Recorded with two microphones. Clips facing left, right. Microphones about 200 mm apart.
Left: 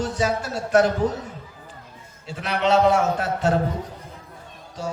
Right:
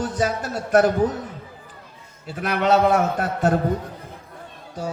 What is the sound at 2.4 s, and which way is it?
A man's voice, 50° right (ahead or behind).